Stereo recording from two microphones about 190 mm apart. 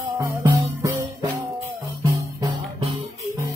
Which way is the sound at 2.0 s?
20° right (ahead or behind).